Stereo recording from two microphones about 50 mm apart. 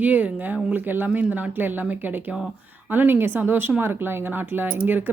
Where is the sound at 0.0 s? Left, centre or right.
Right.